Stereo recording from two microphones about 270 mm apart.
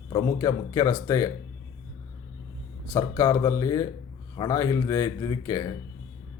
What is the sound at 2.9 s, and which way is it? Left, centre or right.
Speech, centre.